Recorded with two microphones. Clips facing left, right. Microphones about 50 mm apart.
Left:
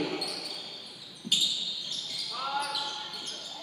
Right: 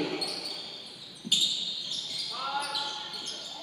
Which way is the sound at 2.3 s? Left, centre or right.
Centre.